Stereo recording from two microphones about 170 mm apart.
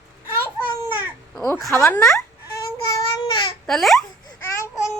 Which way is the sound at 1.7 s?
10° left (ahead or behind).